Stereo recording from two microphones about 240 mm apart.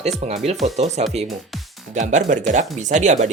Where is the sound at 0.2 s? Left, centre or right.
Right.